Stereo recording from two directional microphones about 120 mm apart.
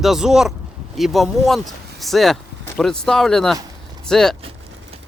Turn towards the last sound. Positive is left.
turn(degrees=5)  # may be behind; listen again after turning